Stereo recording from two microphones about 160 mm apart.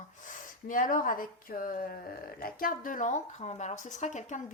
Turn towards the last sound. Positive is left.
turn(degrees=50)  # may be behind; listen again after turning